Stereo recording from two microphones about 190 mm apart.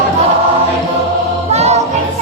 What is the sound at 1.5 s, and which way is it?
Music, 35° right (ahead or behind).